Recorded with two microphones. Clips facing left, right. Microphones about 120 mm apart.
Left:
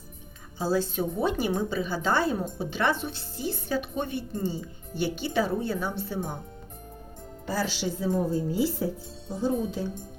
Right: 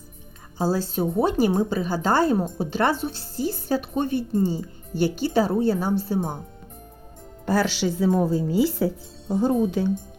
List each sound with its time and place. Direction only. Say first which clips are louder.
0.6 s a woman's voice: right 3 dB; 40° right (ahead or behind)
7.4 s speech: right 7 dB; 70° right (ahead or behind); by 8.9 s 90° right
9.3 s speech: right 7 dB; 65° right (ahead or behind)